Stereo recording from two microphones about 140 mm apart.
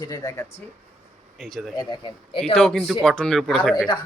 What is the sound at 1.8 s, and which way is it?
Speech, 30° left (ahead or behind).